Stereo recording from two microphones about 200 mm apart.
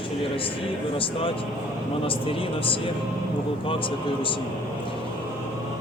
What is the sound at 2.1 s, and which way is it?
Speech, 25° left (ahead or behind).